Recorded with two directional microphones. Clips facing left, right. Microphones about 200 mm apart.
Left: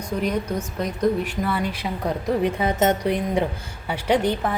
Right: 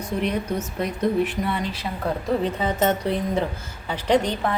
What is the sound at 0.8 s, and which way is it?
Speech, 5° right (ahead or behind).